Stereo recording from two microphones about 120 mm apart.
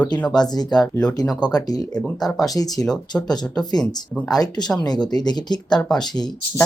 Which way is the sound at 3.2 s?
35° left (ahead or behind).